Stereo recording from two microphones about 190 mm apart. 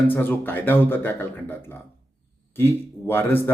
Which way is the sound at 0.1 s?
10° left (ahead or behind).